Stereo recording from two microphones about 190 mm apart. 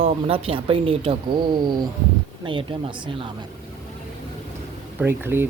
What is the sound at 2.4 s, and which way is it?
Speech, 25° right (ahead or behind).